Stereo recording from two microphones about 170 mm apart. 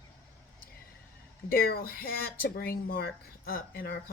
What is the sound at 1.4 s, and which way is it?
Speech, 60° left (ahead or behind).